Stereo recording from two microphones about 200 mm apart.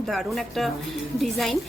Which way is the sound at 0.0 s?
Centre (ahead or behind).